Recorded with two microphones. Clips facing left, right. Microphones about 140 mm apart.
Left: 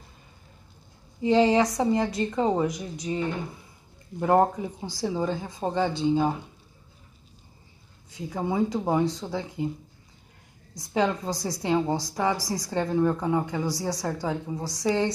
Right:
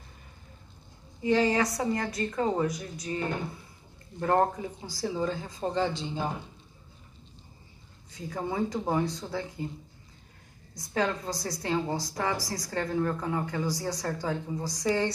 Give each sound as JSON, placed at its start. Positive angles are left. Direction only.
{"t": 1.2, "sound": "a woman's voice", "side_deg": 25}
{"t": 4.2, "sound": "a woman's voice", "side_deg": 15}
{"t": 8.3, "sound": "a woman's voice", "side_deg": 10}
{"t": 10.9, "sound": "a woman's voice", "side_deg": 15}